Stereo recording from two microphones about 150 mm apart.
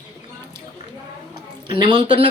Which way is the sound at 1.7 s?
30° right (ahead or behind).